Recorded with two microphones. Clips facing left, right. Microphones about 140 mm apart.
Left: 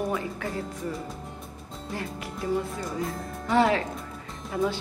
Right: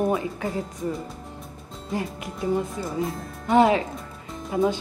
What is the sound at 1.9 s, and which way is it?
A woman's voice, 20° right (ahead or behind).